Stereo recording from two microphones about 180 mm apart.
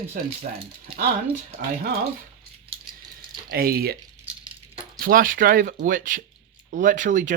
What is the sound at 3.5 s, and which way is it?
Speech, 55° right (ahead or behind).